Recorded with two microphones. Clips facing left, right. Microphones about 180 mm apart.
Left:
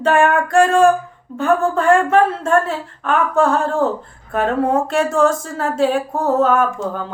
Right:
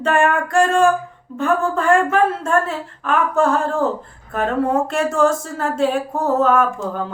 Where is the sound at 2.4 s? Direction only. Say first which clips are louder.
Left 2 dB; centre (ahead or behind).